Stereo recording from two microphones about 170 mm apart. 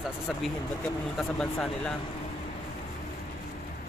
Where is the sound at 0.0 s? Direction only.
5° left (ahead or behind).